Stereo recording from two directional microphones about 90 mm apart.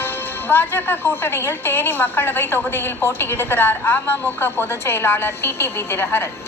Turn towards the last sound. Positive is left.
turn(degrees=25)  # may be behind; listen again after turning